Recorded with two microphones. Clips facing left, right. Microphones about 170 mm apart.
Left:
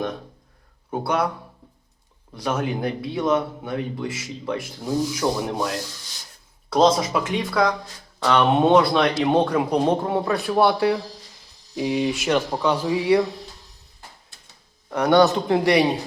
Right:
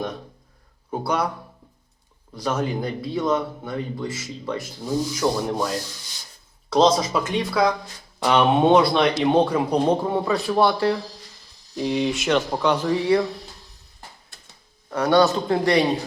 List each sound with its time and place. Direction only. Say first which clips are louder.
0.9 s speech: left 1 dB; 5° left (ahead or behind)
2.3 s speech: even; 10° left (ahead or behind)
6.7 s speech: even; 5° left (ahead or behind)
8.2 s speech: even; 15° right (ahead or behind)
8.4 s speech: even; centre (ahead or behind)
14.9 s speech: left 1 dB; 15° left (ahead or behind)